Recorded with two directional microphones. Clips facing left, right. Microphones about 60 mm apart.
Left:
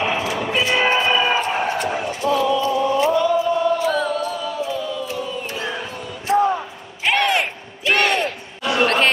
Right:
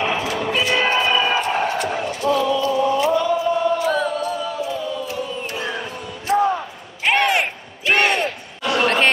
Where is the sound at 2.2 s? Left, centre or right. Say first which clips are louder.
Right 1 dB; left.